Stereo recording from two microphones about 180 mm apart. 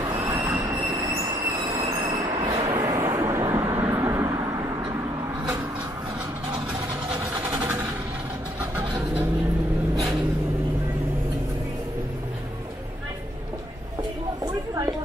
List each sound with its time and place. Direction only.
0.0 s train: 20° right (ahead or behind)
2.1 s vehicle: 20° right (ahead or behind)
7.2 s vehicle: 10° right (ahead or behind)
8.9 s vehicle: 10° right (ahead or behind)
14.4 s a sound: 20° right (ahead or behind)